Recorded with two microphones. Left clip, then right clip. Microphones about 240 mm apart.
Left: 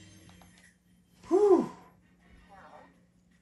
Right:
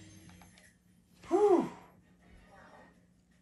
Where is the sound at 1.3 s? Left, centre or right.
Centre.